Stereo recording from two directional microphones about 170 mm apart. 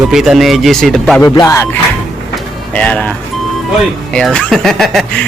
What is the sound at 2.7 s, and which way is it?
Music, 5° left (ahead or behind).